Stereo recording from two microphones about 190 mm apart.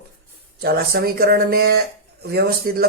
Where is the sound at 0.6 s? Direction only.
55° right (ahead or behind).